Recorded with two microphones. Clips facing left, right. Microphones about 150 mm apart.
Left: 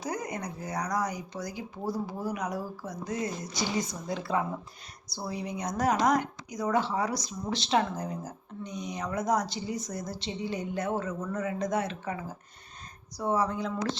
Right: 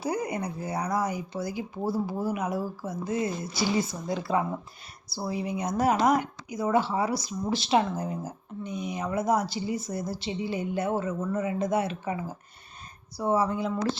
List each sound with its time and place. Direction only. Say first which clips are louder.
0.0 s a woman's voice: right 5 dB; 10° right (ahead or behind)